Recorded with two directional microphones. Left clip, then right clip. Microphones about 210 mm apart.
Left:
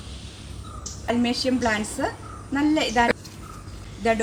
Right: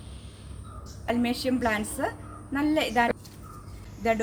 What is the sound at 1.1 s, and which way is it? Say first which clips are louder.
Speech: left 4 dB; 5° right (ahead or behind).